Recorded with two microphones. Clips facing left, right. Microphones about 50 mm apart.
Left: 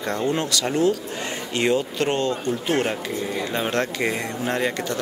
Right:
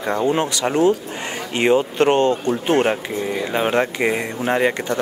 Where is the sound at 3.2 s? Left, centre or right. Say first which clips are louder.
Right 4 dB; centre.